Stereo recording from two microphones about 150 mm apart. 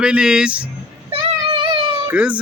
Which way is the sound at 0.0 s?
5° right (ahead or behind).